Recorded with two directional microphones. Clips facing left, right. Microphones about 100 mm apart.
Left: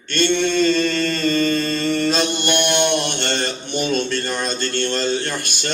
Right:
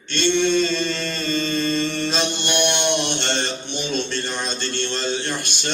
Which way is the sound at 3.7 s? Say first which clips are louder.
Left 6 dB; 50° left (ahead or behind).